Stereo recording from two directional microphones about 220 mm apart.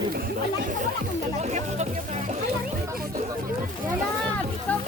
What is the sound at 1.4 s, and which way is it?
Speech, 30° right (ahead or behind).